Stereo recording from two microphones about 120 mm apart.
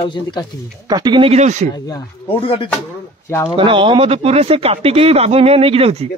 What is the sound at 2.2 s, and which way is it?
Speech, 50° left (ahead or behind).